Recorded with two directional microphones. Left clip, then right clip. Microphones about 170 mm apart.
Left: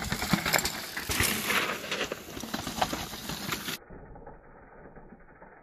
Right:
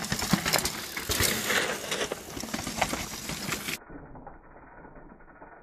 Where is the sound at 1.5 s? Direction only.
50° left (ahead or behind).